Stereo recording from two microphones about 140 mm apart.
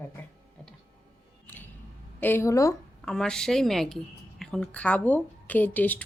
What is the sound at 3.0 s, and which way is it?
A woman's voice, 5° left (ahead or behind).